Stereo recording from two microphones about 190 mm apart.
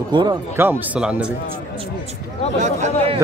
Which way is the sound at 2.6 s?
40° right (ahead or behind).